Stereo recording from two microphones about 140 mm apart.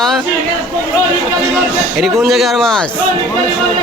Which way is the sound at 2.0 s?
Centre (ahead or behind).